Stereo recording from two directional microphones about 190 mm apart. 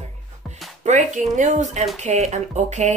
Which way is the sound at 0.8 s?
40° right (ahead or behind).